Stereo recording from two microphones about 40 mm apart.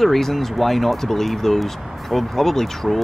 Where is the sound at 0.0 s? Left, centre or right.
Centre.